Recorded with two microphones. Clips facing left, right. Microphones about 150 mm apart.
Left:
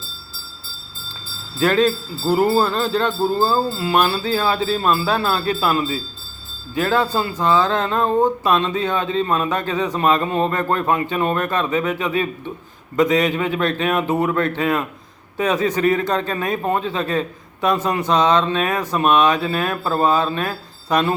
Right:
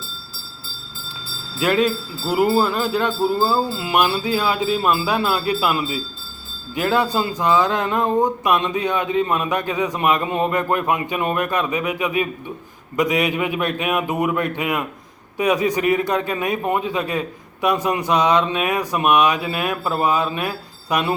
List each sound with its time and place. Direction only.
1.5 s a man's voice: 15° right (ahead or behind)